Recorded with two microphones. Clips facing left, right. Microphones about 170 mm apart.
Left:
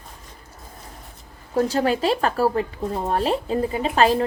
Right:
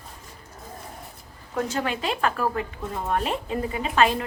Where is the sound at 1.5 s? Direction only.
35° left (ahead or behind).